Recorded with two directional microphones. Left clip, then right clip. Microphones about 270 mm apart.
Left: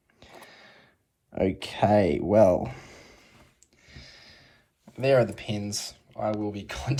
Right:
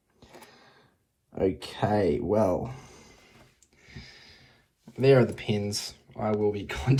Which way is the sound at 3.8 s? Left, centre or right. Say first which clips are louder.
Even; centre.